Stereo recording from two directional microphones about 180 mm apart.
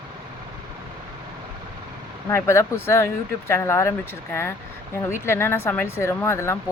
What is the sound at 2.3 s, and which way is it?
Speech, 15° left (ahead or behind).